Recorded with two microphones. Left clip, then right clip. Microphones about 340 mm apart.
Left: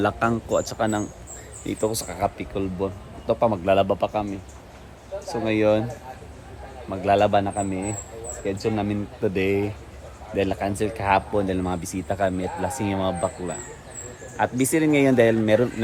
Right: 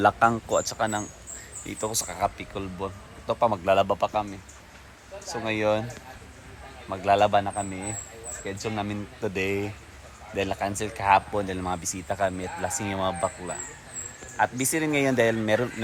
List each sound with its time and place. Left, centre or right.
0.0 s speech: centre
5.3 s speech: centre
6.9 s speech: centre
8.6 s speech: centre